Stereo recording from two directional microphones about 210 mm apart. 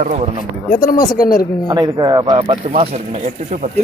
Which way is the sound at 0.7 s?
40° left (ahead or behind).